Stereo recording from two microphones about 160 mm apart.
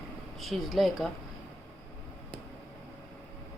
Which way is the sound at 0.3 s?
Centre (ahead or behind).